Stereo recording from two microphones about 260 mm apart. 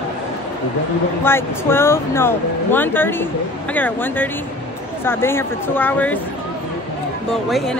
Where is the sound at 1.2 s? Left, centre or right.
Centre.